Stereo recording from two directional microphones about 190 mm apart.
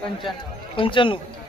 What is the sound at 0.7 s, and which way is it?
Speech, 25° left (ahead or behind).